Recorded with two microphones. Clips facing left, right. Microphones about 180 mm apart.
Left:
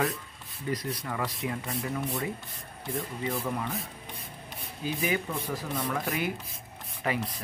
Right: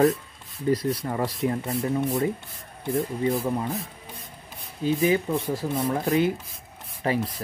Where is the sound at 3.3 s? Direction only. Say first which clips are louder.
Right 7 dB; 25° right (ahead or behind).